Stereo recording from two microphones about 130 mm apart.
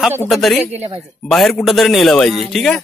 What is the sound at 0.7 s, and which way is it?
Speech, 55° right (ahead or behind).